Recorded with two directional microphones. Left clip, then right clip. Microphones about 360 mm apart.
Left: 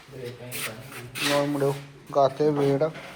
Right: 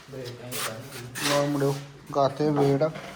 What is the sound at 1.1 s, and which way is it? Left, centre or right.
A man's voice, centre.